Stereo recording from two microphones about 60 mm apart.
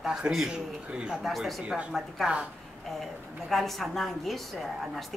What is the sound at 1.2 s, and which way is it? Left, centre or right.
Speech, centre.